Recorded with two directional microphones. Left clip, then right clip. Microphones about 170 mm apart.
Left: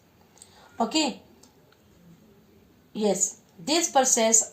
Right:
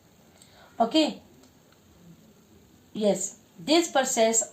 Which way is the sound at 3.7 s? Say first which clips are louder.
Left 1 dB; 45° right (ahead or behind).